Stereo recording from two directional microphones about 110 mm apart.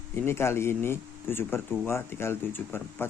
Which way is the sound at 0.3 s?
25° left (ahead or behind).